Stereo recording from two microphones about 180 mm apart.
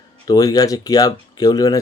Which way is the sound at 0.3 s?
20° left (ahead or behind).